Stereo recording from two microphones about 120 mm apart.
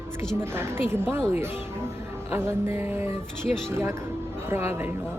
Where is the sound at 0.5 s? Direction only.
20° right (ahead or behind).